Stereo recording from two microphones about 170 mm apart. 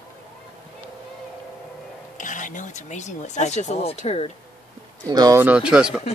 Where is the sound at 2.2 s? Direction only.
50° left (ahead or behind).